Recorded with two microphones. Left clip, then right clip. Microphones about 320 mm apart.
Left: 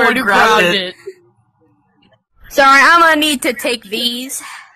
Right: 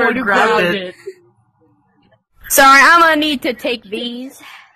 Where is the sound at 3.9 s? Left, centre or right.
Left.